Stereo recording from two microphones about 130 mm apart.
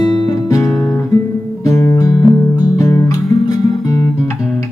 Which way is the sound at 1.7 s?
25° left (ahead or behind).